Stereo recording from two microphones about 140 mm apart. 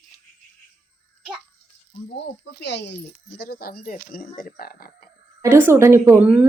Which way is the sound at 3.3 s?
90° left.